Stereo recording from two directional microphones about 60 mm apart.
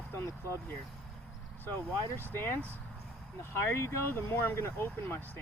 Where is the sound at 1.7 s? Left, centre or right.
Left.